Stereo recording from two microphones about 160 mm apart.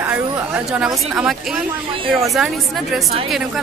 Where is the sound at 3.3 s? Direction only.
5° right (ahead or behind).